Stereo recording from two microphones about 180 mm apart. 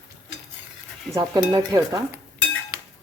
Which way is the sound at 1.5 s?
20° right (ahead or behind).